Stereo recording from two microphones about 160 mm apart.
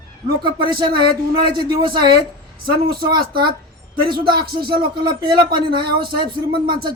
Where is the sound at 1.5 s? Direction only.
30° right (ahead or behind).